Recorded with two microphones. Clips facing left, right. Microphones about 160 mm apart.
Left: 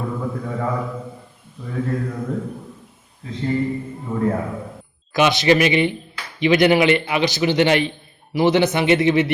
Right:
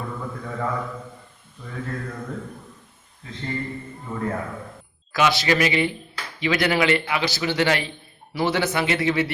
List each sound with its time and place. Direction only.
0.0 s mantra: 10° left (ahead or behind)
3.3 s a man's voice: 5° left (ahead or behind)
5.1 s a man's voice: 20° left (ahead or behind)